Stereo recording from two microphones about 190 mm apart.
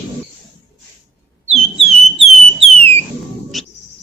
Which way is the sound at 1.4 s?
35° right (ahead or behind).